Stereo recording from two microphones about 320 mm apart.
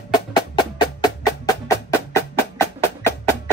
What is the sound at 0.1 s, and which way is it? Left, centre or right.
Music, centre.